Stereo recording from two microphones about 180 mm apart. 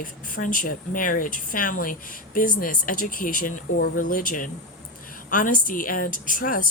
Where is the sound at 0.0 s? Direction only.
50° left (ahead or behind).